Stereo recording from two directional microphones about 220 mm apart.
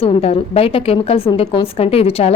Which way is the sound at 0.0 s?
25° left (ahead or behind).